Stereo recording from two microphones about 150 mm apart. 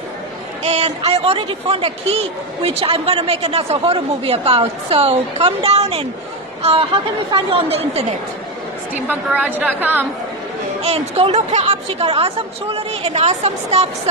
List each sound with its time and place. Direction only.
0.7 s a woman's voice: 45° right (ahead or behind)
8.9 s a woman's voice: 10° right (ahead or behind)
10.8 s a woman's voice: 45° right (ahead or behind)